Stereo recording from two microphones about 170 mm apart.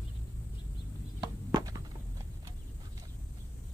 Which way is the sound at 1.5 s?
20° right (ahead or behind).